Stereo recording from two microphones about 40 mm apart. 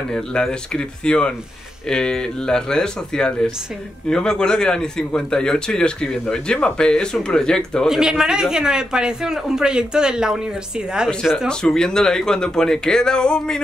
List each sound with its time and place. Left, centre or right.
0.1 s a man's voice: centre
7.9 s speech: centre
11.2 s speech: centre